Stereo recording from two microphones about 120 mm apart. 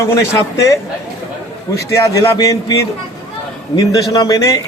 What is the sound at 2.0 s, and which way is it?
A man's voice, 25° left (ahead or behind).